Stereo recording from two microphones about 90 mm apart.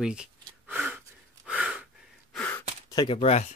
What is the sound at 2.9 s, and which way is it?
Speech, 55° left (ahead or behind).